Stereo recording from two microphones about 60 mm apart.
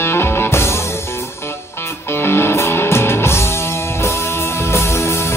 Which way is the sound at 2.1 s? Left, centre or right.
Left.